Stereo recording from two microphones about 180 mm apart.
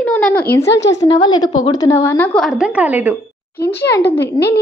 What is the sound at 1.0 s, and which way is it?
A woman's voice, 25° left (ahead or behind).